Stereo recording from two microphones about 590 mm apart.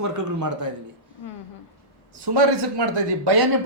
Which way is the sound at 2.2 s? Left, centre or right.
Right.